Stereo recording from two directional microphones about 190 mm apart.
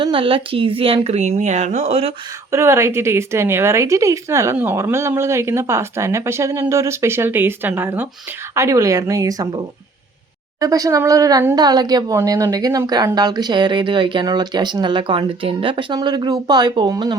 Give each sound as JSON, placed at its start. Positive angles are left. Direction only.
{"t": 0.0, "sound": "speech", "side_deg": -25}
{"t": 2.5, "sound": "speech", "side_deg": -15}
{"t": 10.6, "sound": "speech", "side_deg": -20}